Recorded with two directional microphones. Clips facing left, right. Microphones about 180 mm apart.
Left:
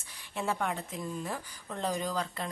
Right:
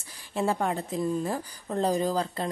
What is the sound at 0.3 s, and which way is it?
Speech, 35° right (ahead or behind).